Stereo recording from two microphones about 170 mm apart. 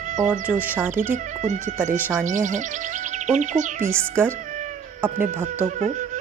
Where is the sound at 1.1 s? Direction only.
45° right (ahead or behind).